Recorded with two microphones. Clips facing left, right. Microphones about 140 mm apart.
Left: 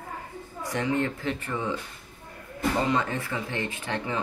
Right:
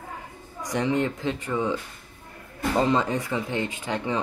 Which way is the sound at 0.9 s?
20° right (ahead or behind).